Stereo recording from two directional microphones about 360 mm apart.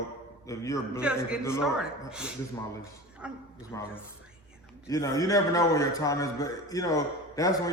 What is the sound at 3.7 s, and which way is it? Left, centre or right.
Speech, centre.